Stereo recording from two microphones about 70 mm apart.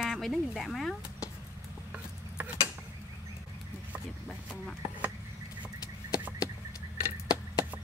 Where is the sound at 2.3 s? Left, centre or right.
Centre.